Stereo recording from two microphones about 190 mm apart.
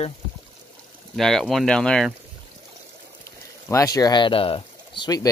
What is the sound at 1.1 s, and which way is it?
Speech, centre (ahead or behind).